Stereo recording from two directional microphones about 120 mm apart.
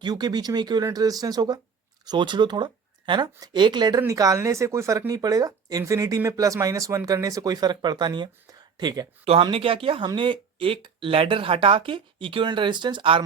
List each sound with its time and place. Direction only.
0.0 s speech: 35° right (ahead or behind)
9.2 s speech: 50° right (ahead or behind)